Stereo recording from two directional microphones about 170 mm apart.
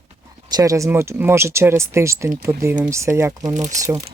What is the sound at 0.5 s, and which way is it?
Speech, 20° right (ahead or behind).